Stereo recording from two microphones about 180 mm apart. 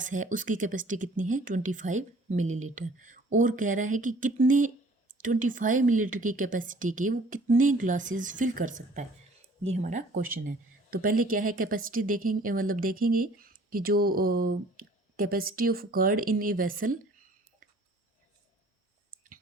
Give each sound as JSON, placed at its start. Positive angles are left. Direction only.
{"t": 0.0, "sound": "a woman's voice", "side_deg": -45}